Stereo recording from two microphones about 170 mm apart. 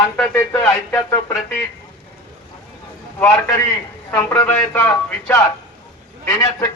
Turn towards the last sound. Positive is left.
turn(degrees=20)  # may be behind; listen again after turning